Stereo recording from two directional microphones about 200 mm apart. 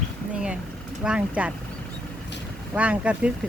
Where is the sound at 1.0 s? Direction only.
5° right (ahead or behind).